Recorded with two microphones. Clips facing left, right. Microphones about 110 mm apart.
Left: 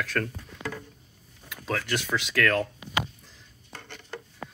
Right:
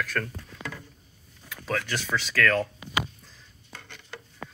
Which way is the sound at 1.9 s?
15° left (ahead or behind).